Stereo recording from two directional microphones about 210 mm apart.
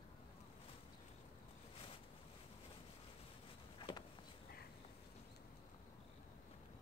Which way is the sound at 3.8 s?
20° left (ahead or behind).